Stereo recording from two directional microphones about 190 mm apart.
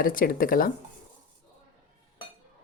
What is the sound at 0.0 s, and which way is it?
Speech, 50° left (ahead or behind).